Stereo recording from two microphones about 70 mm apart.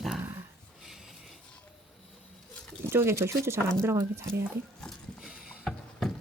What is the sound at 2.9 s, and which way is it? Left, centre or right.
Speech, right.